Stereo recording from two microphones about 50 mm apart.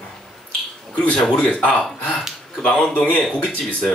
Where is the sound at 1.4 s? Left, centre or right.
Left.